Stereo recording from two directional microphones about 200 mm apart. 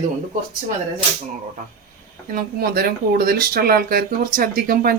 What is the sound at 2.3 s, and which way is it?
Speech, 50° right (ahead or behind).